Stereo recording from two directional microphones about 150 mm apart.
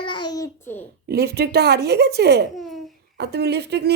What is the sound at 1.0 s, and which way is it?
Speech, 90° right.